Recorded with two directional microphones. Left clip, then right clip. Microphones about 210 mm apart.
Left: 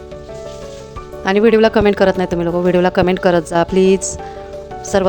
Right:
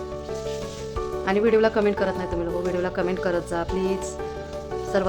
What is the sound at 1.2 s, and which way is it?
Speech, 40° left (ahead or behind).